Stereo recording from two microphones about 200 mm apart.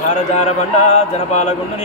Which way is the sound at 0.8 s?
35° left (ahead or behind).